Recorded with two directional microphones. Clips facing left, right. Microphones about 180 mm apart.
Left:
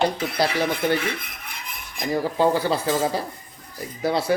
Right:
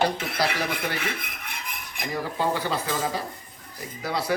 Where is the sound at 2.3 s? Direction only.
35° left (ahead or behind).